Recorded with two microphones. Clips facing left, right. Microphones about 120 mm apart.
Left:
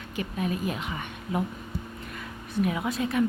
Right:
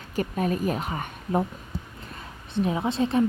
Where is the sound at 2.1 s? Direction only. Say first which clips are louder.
Right 1 dB; 30° right (ahead or behind).